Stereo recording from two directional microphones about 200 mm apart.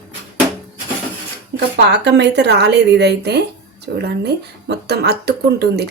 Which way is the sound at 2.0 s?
60° right (ahead or behind).